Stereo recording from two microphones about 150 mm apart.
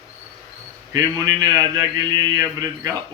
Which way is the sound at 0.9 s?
25° right (ahead or behind).